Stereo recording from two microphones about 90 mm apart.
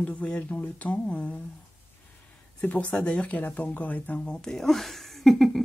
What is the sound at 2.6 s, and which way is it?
Speech, 15° left (ahead or behind).